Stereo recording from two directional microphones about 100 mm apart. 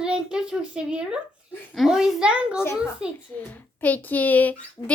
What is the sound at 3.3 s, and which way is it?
A child's voice, 15° left (ahead or behind).